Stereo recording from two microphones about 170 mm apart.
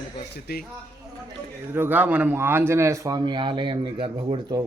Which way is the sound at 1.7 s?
10° right (ahead or behind).